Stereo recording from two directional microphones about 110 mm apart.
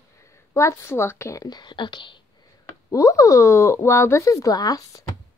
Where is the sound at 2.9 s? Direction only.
30° left (ahead or behind).